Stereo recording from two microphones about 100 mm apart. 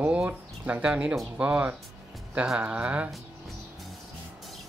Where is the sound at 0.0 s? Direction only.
10° right (ahead or behind).